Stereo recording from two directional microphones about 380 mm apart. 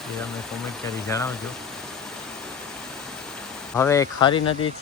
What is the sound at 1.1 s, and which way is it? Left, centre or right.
Speech, centre.